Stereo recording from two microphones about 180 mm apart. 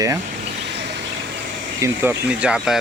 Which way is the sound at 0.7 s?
70° right (ahead or behind).